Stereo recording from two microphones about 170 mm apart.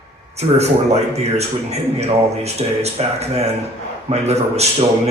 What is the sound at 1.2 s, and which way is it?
Speech, 40° right (ahead or behind).